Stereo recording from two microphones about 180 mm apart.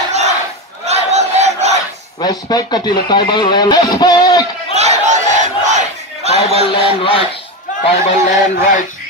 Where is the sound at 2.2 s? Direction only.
20° left (ahead or behind).